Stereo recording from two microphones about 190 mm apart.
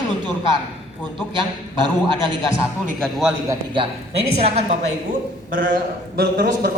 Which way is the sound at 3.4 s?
25° right (ahead or behind).